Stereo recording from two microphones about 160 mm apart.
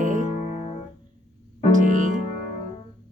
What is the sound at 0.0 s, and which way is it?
Music, 55° right (ahead or behind).